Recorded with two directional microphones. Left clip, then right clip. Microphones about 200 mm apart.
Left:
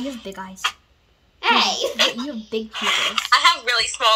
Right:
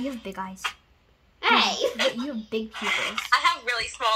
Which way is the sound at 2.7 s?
30° left (ahead or behind).